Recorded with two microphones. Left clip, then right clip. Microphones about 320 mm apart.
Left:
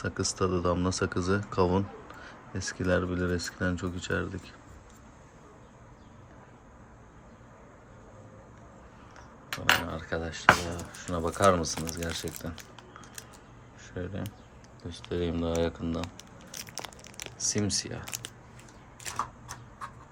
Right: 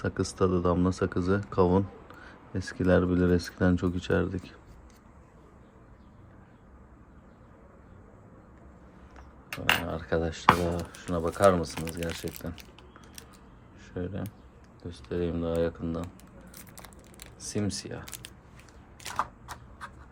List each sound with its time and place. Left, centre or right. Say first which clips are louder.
0.0 s speech: right 2 dB; centre
9.6 s speech: left 1 dB; centre
13.9 s speech: right 2 dB; centre
16.5 s a sound: left 11 dB; left
17.5 s speech: left 1 dB; centre